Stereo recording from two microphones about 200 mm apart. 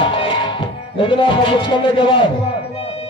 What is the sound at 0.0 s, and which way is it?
Music, 25° left (ahead or behind).